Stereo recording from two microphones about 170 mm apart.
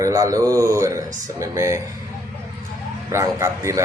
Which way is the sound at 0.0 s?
20° right (ahead or behind).